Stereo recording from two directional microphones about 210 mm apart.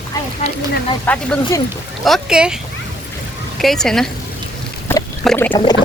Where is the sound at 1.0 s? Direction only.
10° left (ahead or behind).